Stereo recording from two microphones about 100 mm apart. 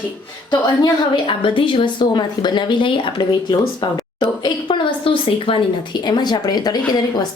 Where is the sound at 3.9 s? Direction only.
45° left (ahead or behind).